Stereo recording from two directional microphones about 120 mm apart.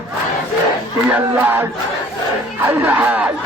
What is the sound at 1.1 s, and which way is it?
A man's voice, 15° right (ahead or behind).